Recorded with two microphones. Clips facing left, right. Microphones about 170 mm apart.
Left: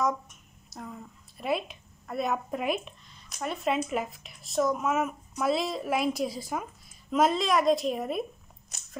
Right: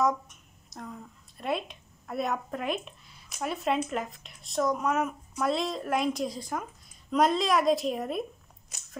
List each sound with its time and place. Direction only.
0.7 s a woman's voice: centre (ahead or behind)
2.8 s speech: 5° right (ahead or behind)